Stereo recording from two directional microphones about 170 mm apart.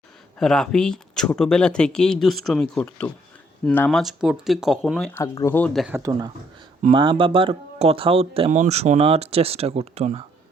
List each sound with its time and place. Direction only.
0.3 s speech: 5° left (ahead or behind)
5.1 s speech: 20° left (ahead or behind); by 5.9 s 5° left (ahead or behind)
5.9 s speech: 20° right (ahead or behind); by 10.2 s 40° right (ahead or behind)